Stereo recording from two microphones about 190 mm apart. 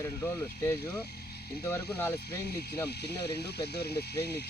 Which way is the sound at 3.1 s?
60° left (ahead or behind).